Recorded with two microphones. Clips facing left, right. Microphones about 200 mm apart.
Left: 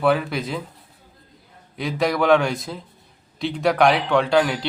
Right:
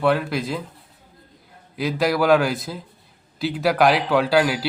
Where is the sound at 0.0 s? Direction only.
Centre (ahead or behind).